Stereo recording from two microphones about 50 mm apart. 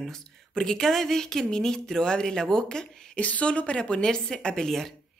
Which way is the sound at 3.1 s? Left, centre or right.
Left.